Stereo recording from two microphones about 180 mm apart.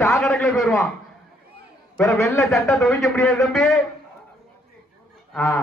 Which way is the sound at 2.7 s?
Centre (ahead or behind).